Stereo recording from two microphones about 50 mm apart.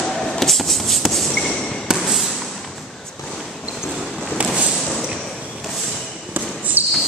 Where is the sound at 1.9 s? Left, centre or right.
Centre.